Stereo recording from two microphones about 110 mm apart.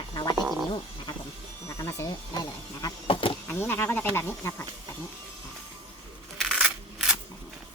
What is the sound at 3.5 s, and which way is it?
Speech, 20° left (ahead or behind).